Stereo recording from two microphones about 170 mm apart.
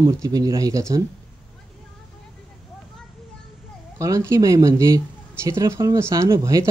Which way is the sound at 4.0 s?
20° right (ahead or behind).